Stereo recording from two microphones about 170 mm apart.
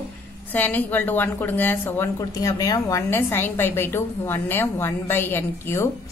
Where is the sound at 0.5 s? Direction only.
10° left (ahead or behind).